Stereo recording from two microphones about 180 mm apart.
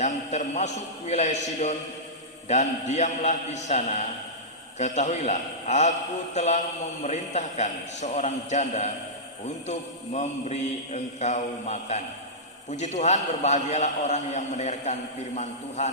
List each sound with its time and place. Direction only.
0.0 s mantra: 40° left (ahead or behind)